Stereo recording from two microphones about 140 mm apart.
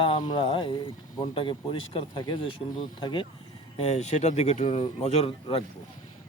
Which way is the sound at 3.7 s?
50° left (ahead or behind).